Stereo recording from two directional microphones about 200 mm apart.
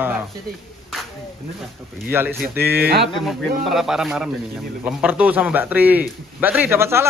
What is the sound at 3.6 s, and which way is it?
A man's voice, centre (ahead or behind).